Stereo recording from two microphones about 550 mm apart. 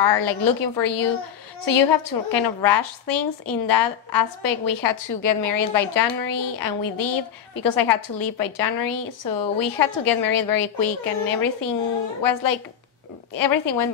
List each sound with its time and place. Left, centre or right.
0.2 s a woman's voice: left